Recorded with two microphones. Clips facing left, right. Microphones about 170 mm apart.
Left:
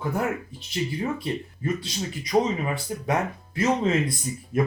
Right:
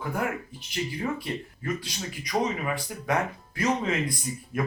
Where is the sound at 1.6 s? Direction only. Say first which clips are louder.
Left 4 dB; 25° left (ahead or behind).